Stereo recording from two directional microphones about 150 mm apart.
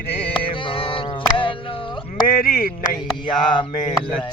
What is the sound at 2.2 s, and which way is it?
Speech, 70° left (ahead or behind).